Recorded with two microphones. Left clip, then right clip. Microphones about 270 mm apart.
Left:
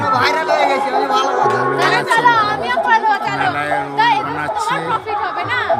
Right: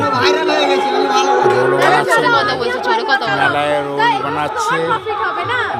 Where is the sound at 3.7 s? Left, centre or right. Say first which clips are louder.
Even; centre.